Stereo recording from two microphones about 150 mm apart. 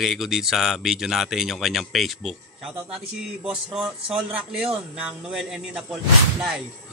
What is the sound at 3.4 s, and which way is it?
A man's voice, 5° right (ahead or behind).